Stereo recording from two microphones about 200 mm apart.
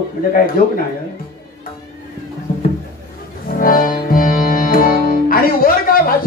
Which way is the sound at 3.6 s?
45° left (ahead or behind).